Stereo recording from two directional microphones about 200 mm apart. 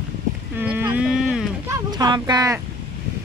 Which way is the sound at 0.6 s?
10° right (ahead or behind).